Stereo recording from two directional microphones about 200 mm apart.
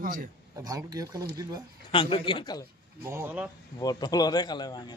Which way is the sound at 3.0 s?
10° right (ahead or behind).